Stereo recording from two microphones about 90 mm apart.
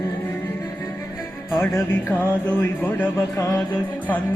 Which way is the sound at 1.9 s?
20° left (ahead or behind).